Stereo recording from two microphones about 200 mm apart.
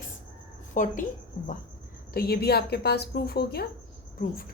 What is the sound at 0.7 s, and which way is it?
Speech, 40° left (ahead or behind).